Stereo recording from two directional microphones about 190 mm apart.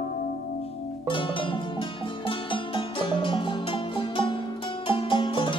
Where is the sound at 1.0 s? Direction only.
25° left (ahead or behind).